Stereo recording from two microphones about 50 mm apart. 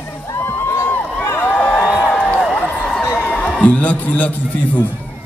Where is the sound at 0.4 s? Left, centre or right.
Left.